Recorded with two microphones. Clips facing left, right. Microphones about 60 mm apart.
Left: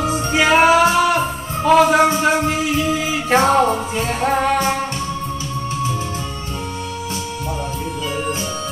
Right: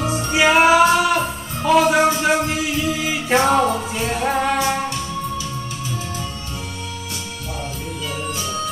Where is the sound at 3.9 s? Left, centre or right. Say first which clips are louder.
Left 2 dB; left.